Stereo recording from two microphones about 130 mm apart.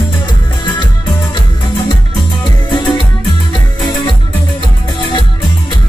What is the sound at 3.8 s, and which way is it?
Music, 40° left (ahead or behind).